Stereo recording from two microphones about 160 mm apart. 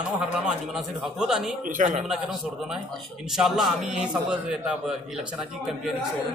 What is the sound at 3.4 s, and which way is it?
Speech, centre (ahead or behind).